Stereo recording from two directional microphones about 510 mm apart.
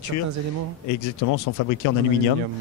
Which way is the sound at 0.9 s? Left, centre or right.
Left.